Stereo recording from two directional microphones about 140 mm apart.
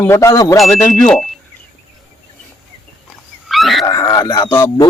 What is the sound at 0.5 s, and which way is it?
Speech, centre (ahead or behind).